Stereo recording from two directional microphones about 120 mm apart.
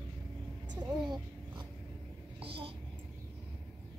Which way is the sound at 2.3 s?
50° right (ahead or behind).